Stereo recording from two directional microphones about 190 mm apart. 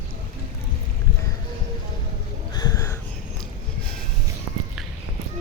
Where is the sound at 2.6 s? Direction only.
15° left (ahead or behind).